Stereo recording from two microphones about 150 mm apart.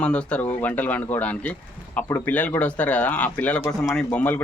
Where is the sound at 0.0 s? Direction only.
5° left (ahead or behind).